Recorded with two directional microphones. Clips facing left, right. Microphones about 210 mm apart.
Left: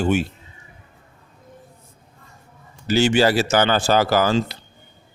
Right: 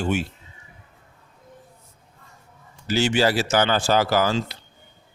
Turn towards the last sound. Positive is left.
turn(degrees=50)  # may be behind; listen again after turning